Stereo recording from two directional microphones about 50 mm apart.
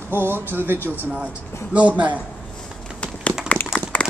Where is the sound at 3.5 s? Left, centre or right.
Left.